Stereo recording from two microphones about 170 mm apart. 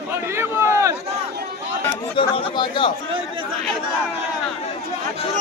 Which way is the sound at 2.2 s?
25° left (ahead or behind).